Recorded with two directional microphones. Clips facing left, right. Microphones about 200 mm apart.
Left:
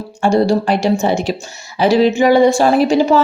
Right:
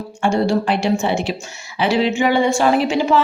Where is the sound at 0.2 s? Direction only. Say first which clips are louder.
Left 4 dB; 40° left (ahead or behind).